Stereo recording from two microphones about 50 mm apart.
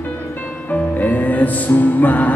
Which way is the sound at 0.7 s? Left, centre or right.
Left.